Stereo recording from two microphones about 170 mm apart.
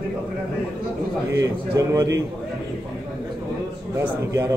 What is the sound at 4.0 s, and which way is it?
Speech, 15° right (ahead or behind).